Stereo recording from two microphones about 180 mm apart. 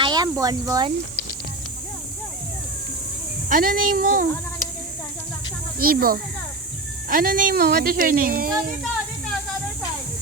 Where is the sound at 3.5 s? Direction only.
50° right (ahead or behind).